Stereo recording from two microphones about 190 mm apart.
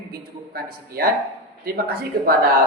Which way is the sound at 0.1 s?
50° right (ahead or behind).